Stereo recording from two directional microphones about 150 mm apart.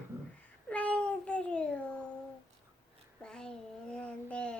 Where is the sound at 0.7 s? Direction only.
10° left (ahead or behind).